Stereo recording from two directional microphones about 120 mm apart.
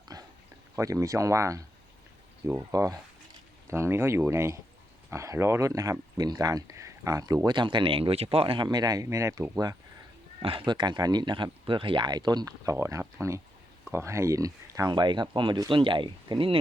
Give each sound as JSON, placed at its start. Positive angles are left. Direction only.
{"t": 0.1, "sound": "a sound", "side_deg": -30}
{"t": 0.8, "sound": "speech", "side_deg": -25}
{"t": 7.4, "sound": "speech", "side_deg": -40}
{"t": 10.4, "sound": "speech", "side_deg": -45}